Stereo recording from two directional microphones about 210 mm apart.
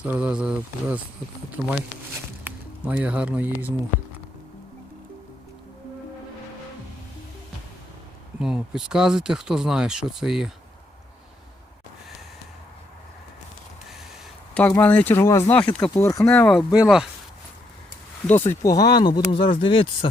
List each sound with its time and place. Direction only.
0.0 s speech: 5° right (ahead or behind)
8.4 s speech: 5° right (ahead or behind)
14.5 s speech: 5° left (ahead or behind)
18.3 s speech: 10° left (ahead or behind)